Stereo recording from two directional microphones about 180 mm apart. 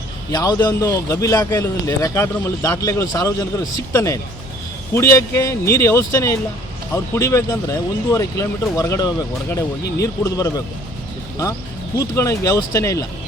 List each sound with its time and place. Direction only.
0.3 s a man's voice: 20° left (ahead or behind)
11.9 s a man's voice: 15° left (ahead or behind)